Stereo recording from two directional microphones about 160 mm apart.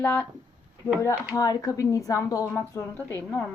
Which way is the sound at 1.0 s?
25° left (ahead or behind).